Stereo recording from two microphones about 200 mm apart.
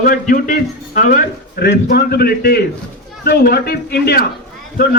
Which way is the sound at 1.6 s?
55° left (ahead or behind).